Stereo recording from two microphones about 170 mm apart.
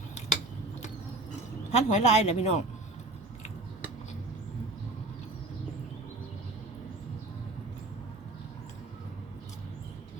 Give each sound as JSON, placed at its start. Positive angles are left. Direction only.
{"t": 1.7, "sound": "speech", "side_deg": 40}